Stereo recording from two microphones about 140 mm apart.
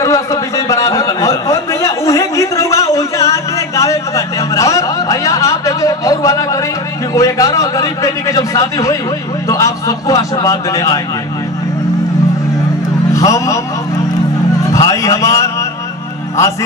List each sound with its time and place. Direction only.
0.0 s a sound: 20° left (ahead or behind)
7.2 s a man's voice: 25° left (ahead or behind)
13.1 s a man's voice: 25° left (ahead or behind)
14.7 s a man's voice: 25° left (ahead or behind)